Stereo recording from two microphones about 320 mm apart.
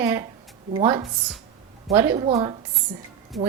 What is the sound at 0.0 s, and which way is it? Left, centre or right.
A woman's voice, centre.